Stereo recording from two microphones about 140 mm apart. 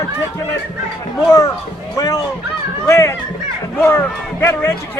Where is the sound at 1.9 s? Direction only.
25° left (ahead or behind).